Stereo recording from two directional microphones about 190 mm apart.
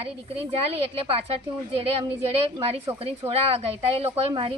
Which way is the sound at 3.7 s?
30° right (ahead or behind).